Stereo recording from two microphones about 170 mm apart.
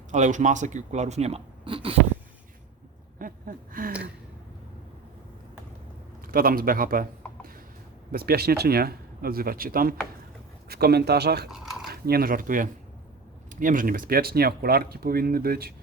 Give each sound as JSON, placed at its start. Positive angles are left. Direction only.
{"t": 0.1, "sound": "speech", "side_deg": -45}
{"t": 3.2, "sound": "a sound", "side_deg": -55}
{"t": 6.2, "sound": "speech", "side_deg": -60}
{"t": 8.1, "sound": "speech", "side_deg": -65}
{"t": 11.5, "sound": "a sound", "side_deg": 0}
{"t": 11.9, "sound": "speech", "side_deg": -65}